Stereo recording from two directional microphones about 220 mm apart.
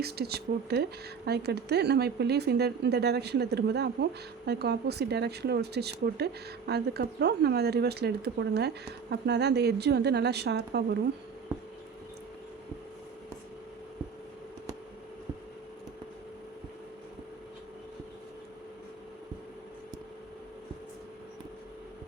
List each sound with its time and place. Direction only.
0.0 s speech: 45° right (ahead or behind)